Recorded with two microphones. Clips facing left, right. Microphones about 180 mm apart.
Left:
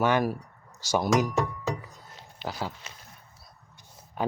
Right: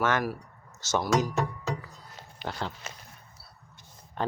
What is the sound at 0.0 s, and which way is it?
Speech, 20° left (ahead or behind).